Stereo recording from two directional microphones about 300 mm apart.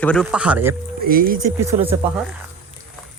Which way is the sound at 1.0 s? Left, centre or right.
Right.